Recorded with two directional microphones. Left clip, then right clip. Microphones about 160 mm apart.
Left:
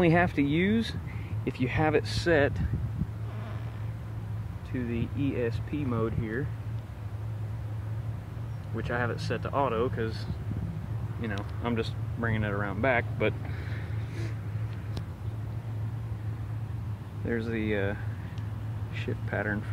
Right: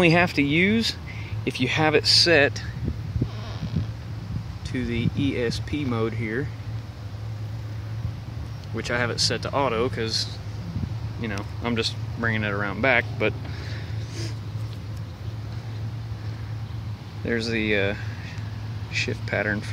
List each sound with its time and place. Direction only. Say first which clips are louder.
0.0 s speech: right 5 dB; 15° right (ahead or behind)
4.7 s speech: right 6 dB; 30° right (ahead or behind)
8.7 s speech: right 7 dB; 30° right (ahead or behind)
11.2 s speech: right 4 dB; 20° right (ahead or behind)
17.3 s speech: right 7 dB; 20° right (ahead or behind)
19.0 s speech: right 4 dB; 20° right (ahead or behind)